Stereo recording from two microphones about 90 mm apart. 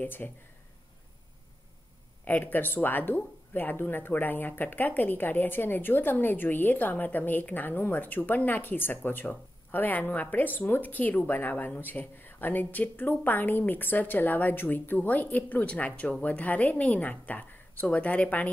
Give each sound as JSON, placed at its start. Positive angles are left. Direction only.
{"t": 0.0, "sound": "speech", "side_deg": 20}
{"t": 2.2, "sound": "speech", "side_deg": 20}